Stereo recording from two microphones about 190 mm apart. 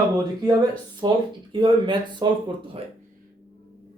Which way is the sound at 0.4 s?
20° right (ahead or behind).